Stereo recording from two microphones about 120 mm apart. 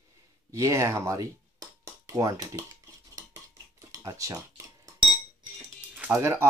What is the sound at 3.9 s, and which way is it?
Speech, 30° right (ahead or behind).